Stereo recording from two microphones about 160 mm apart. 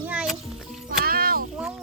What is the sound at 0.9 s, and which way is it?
Speech, 65° right (ahead or behind).